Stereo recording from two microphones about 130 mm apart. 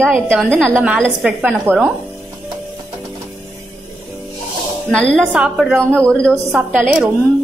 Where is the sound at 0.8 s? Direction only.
10° right (ahead or behind).